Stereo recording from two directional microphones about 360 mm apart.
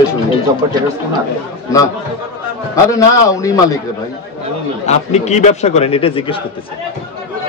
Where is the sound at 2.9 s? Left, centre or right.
Centre.